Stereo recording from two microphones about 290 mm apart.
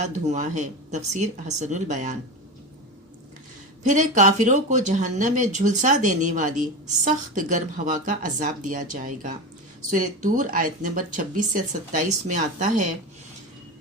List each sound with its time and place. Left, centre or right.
0.1 s speech: right
3.8 s speech: right